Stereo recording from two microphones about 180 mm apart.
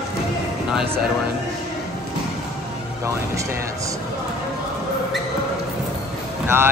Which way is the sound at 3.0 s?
15° right (ahead or behind).